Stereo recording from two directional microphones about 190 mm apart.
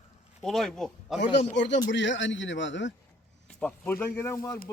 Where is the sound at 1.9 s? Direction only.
75° left (ahead or behind).